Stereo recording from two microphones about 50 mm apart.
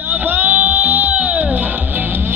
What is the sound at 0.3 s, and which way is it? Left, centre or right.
Music, right.